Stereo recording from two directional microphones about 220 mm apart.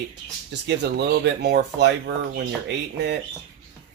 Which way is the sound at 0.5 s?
50° right (ahead or behind).